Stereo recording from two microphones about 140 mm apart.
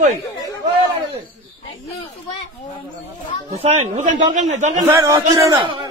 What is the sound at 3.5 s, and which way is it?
Speech, 50° right (ahead or behind).